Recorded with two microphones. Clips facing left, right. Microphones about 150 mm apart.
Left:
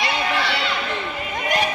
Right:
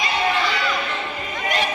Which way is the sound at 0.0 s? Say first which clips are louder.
Right 1 dB; 70° left (ahead or behind).